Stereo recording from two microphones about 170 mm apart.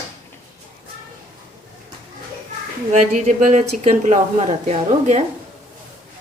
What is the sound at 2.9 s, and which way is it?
Speech, 45° right (ahead or behind).